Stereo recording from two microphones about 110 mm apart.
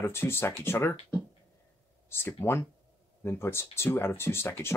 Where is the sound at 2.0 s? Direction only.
20° left (ahead or behind).